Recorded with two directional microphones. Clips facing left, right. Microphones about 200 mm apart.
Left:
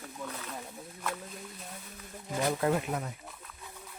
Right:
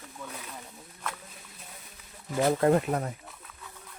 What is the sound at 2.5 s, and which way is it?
Speech, 45° right (ahead or behind).